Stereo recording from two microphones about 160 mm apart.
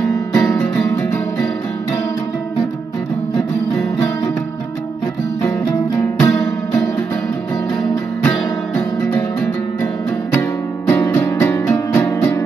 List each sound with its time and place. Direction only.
0.3 s music: 20° left (ahead or behind)
6.2 s music: 20° left (ahead or behind)
8.2 s music: 10° left (ahead or behind)
10.9 s music: 15° left (ahead or behind)